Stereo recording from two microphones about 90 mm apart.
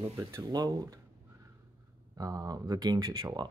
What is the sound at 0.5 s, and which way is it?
Speech, 50° right (ahead or behind).